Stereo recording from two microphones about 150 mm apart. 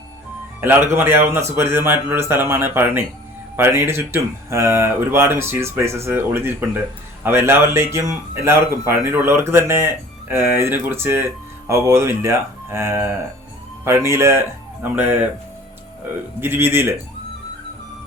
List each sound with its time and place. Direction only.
0.6 s speech: 15° right (ahead or behind)
16.4 s speech: 15° right (ahead or behind)